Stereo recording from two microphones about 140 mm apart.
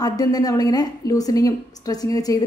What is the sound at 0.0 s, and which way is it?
A woman's voice, 25° left (ahead or behind).